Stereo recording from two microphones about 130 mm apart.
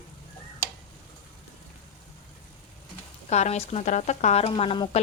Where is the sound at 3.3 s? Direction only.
60° left (ahead or behind).